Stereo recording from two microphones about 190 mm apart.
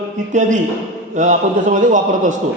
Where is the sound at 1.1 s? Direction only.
40° right (ahead or behind).